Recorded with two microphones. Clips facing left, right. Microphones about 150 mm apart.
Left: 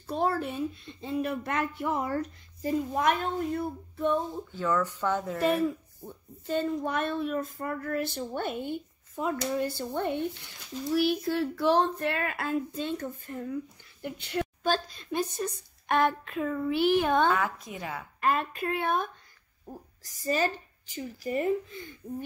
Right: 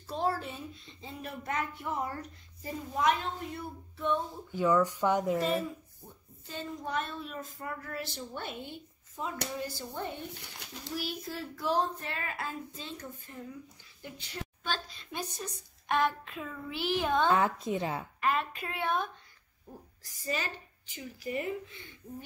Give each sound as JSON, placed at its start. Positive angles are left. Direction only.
{"t": 0.0, "sound": "a woman's voice", "side_deg": 55}
{"t": 2.9, "sound": "a woman's voice", "side_deg": 55}
{"t": 4.5, "sound": "speech", "side_deg": -15}
{"t": 5.4, "sound": "speech", "side_deg": 65}
{"t": 10.6, "sound": "speech", "side_deg": -70}
{"t": 11.0, "sound": "speech", "side_deg": 70}
{"t": 14.6, "sound": "a woman's voice", "side_deg": 40}
{"t": 17.3, "sound": "a woman's voice", "side_deg": -25}
{"t": 18.2, "sound": "a woman's voice", "side_deg": 45}